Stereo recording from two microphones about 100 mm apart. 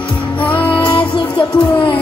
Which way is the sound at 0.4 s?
15° left (ahead or behind).